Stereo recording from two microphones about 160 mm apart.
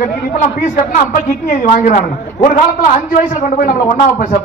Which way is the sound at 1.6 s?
50° left (ahead or behind).